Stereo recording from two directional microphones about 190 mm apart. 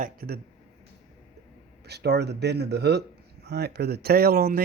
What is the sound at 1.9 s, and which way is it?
Speech, 60° right (ahead or behind).